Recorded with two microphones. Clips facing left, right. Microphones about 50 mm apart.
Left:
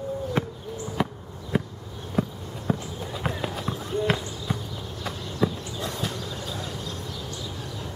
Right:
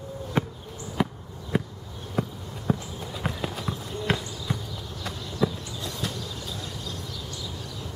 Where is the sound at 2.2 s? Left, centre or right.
Centre.